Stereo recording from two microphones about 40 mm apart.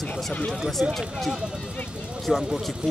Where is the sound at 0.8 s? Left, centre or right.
Right.